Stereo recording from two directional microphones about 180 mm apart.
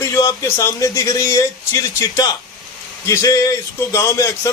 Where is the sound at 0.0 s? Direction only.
15° left (ahead or behind).